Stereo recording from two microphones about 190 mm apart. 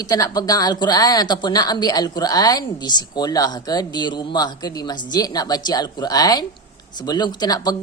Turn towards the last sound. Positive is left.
turn(degrees=20)  # may be behind; listen again after turning